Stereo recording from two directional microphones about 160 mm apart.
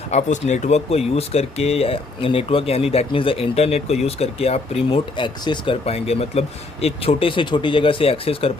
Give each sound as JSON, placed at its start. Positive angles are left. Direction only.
{"t": 0.1, "sound": "speech", "side_deg": 45}